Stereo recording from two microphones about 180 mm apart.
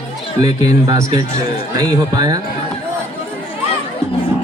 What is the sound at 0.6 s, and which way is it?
Speech, 20° right (ahead or behind).